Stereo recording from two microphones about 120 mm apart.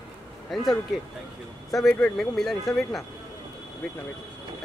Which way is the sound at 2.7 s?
Centre (ahead or behind).